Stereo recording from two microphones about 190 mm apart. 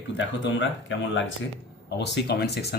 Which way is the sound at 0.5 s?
75° left (ahead or behind).